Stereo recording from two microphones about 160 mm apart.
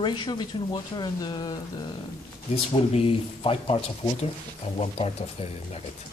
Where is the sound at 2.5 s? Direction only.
35° left (ahead or behind).